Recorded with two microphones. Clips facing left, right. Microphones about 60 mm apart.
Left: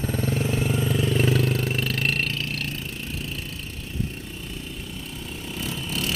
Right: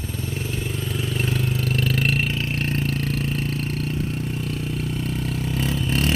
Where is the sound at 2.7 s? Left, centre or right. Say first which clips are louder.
Right 8 dB; right.